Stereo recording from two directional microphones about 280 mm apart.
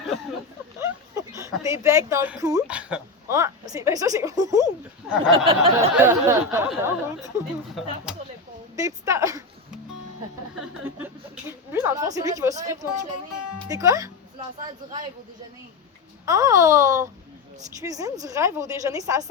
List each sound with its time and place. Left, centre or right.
0.8 s speech: centre
5.5 s a sound: centre
6.1 s a woman's voice: centre
8.7 s a woman's voice: centre
10.8 s a woman's voice: centre
16.2 s a woman's voice: centre